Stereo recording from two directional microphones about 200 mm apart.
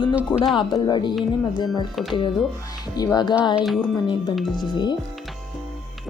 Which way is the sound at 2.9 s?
20° left (ahead or behind).